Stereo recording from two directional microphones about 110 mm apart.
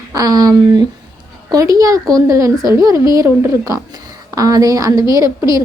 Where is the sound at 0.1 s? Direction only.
35° right (ahead or behind).